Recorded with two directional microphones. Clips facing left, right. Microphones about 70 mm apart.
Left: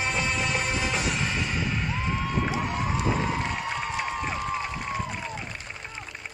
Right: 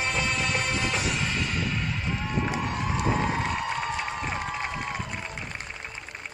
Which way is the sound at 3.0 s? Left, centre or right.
Right.